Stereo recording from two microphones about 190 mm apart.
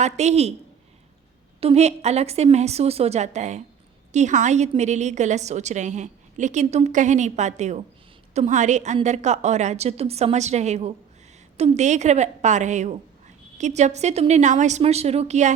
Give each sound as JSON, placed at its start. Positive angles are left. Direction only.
{"t": 0.0, "sound": "a woman's voice", "side_deg": -35}
{"t": 1.6, "sound": "a woman's voice", "side_deg": -35}